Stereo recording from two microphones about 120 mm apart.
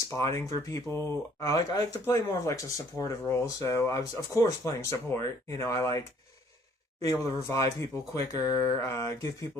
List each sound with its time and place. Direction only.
0.1 s speech: 25° left (ahead or behind)
7.0 s speech: 25° left (ahead or behind)